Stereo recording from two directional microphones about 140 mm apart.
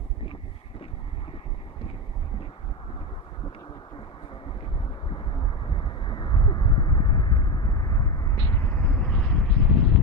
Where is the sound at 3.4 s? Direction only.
35° left (ahead or behind).